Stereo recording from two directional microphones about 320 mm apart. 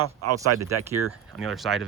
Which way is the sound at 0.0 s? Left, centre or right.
Right.